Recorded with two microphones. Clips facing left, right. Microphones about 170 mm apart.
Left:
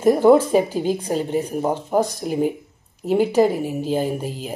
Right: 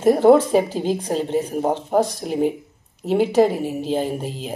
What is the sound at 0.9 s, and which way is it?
Speech, 40° right (ahead or behind).